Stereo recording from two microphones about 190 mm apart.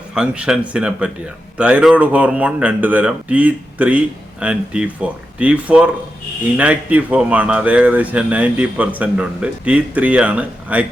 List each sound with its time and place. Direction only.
0.1 s speech: 5° right (ahead or behind)